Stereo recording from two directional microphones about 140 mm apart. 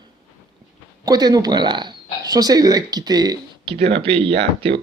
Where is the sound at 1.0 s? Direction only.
30° right (ahead or behind).